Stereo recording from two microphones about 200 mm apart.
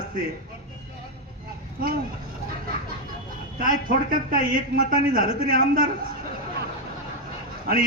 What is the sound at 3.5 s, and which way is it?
A man's voice, 45° right (ahead or behind).